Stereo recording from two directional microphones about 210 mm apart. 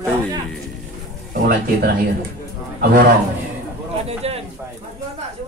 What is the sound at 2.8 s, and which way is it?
Speech, 45° right (ahead or behind).